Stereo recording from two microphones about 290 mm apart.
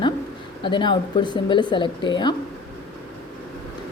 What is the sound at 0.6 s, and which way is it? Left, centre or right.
Speech, centre.